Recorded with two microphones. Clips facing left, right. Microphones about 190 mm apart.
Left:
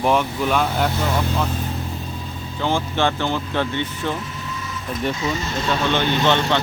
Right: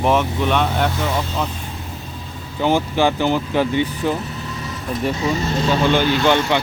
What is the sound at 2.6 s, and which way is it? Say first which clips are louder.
Speech: right 4 dB; 15° right (ahead or behind).